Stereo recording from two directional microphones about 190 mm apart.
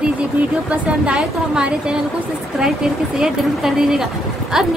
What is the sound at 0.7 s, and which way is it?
A woman's voice, 5° right (ahead or behind).